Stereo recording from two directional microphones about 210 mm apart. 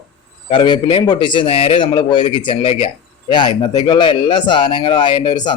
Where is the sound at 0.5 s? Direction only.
25° left (ahead or behind).